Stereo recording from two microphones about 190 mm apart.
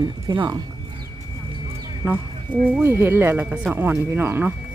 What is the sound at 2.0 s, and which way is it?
Speech, 10° right (ahead or behind).